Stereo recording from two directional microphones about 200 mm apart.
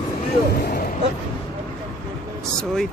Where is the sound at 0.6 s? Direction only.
45° left (ahead or behind).